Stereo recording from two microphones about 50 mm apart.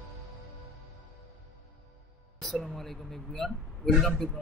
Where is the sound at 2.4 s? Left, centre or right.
Centre.